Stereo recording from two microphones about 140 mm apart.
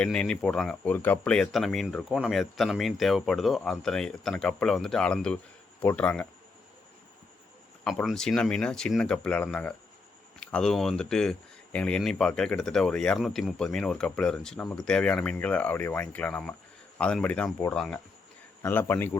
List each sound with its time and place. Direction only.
0.0 s speech: 5° left (ahead or behind)
8.0 s speech: centre (ahead or behind)
18.6 s speech: 15° left (ahead or behind)